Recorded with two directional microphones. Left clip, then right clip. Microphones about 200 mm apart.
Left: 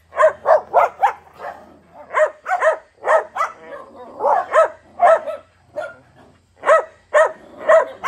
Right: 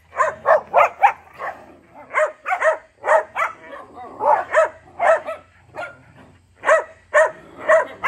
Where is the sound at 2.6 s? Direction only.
50° left (ahead or behind).